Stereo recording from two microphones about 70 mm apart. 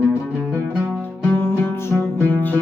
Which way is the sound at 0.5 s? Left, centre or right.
Left.